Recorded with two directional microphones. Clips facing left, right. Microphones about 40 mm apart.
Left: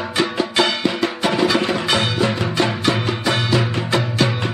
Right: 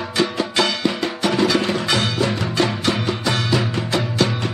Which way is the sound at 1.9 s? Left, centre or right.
Left.